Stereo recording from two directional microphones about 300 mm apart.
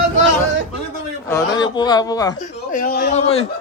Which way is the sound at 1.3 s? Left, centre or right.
Centre.